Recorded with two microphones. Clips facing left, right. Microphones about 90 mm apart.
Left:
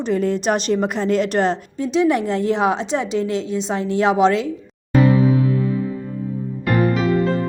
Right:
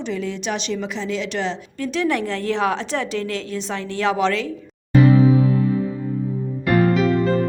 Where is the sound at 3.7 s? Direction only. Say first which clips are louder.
Left 4 dB; 35° left (ahead or behind).